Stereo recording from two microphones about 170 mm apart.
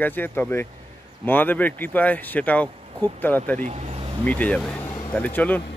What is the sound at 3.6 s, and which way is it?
Speech, 45° right (ahead or behind).